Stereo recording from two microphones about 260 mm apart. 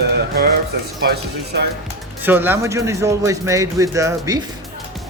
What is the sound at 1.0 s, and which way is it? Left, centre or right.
Speech, right.